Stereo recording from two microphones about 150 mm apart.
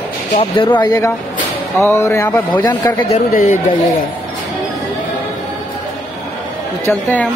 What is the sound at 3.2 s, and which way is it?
Speech, 55° left (ahead or behind).